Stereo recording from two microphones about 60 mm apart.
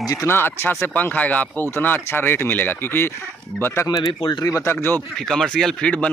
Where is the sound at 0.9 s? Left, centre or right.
Left.